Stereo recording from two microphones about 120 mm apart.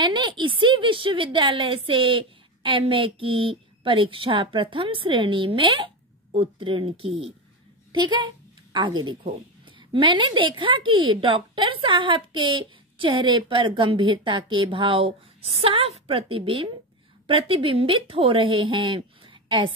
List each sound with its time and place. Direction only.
0.0 s a woman's voice: 40° right (ahead or behind)